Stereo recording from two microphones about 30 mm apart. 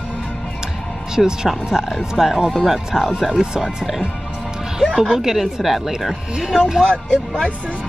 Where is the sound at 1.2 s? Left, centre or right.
Centre.